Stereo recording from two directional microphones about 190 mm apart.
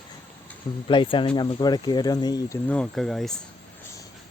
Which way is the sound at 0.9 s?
25° left (ahead or behind).